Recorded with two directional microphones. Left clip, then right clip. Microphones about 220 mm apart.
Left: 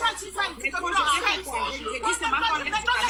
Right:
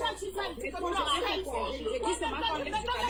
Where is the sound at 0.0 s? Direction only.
15° left (ahead or behind).